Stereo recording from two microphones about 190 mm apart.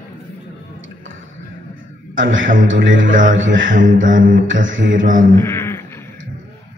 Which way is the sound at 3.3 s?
80° right.